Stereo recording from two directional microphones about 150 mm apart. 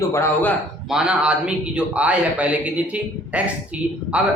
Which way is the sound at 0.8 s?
5° right (ahead or behind).